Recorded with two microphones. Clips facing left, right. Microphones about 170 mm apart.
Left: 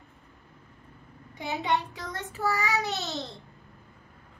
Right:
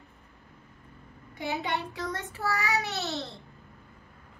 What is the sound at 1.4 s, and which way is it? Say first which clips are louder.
Child singing: left 2 dB; 20° left (ahead or behind).